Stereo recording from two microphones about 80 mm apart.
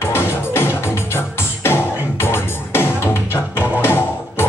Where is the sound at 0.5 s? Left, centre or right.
Left.